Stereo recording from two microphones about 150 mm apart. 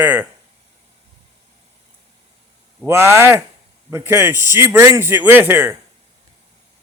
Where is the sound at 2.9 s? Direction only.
15° right (ahead or behind).